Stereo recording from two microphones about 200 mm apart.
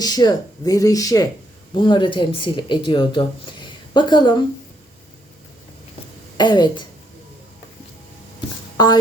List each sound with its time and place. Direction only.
0.0 s speech: 20° left (ahead or behind)
6.3 s speech: 20° left (ahead or behind)
8.8 s speech: 20° left (ahead or behind)